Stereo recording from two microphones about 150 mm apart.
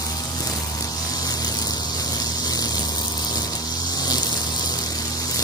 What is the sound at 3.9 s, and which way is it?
Vehicle, 25° left (ahead or behind).